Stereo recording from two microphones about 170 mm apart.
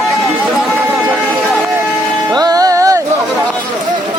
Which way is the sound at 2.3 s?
20° right (ahead or behind).